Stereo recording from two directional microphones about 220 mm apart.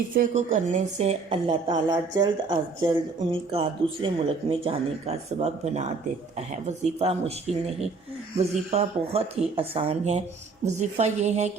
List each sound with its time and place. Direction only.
0.1 s a woman's voice: 35° right (ahead or behind)
8.4 s a woman's voice: 30° right (ahead or behind)